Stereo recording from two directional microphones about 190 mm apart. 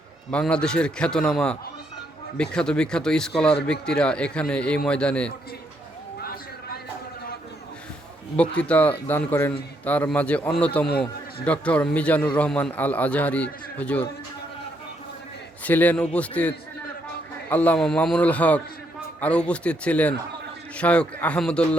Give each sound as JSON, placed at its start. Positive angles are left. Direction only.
{"t": 0.3, "sound": "a man's voice", "side_deg": 5}
{"t": 6.2, "sound": "a sound", "side_deg": 50}
{"t": 8.4, "sound": "a man's voice", "side_deg": 5}
{"t": 15.6, "sound": "a man's voice", "side_deg": 10}